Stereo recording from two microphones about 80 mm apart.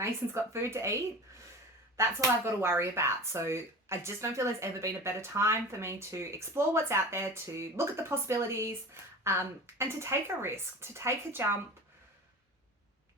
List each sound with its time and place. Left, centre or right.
0.5 s speech: right
2.0 s speech: right